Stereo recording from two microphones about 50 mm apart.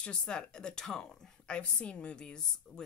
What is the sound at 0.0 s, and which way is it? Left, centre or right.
A woman's voice, centre.